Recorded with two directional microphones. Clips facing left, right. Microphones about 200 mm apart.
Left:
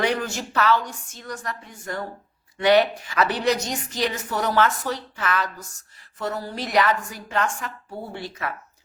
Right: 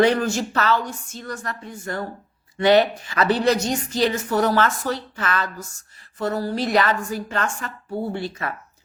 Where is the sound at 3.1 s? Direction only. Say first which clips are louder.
Right 3 dB; 15° left (ahead or behind).